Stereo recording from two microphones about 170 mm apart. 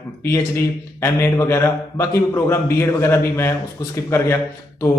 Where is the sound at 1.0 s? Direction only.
15° left (ahead or behind).